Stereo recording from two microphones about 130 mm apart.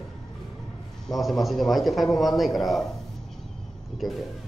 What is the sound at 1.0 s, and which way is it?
A man's voice, centre (ahead or behind).